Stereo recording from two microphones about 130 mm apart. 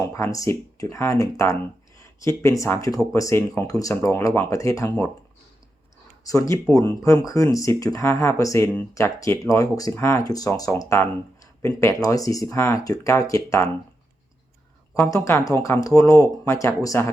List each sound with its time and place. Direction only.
0.0 s speech: 20° left (ahead or behind)
6.2 s speech: 25° left (ahead or behind)
15.1 s speech: 25° left (ahead or behind)